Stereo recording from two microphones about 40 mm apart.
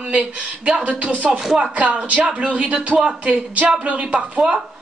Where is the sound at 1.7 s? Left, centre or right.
Right.